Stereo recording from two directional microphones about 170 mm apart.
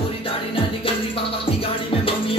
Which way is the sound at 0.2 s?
30° left (ahead or behind).